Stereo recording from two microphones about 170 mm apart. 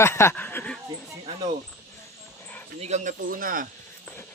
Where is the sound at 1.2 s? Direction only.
30° right (ahead or behind).